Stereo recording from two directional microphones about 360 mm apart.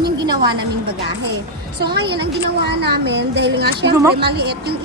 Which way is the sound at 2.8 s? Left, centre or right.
Right.